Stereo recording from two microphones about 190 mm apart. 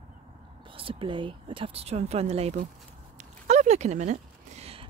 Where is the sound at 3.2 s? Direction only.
35° right (ahead or behind).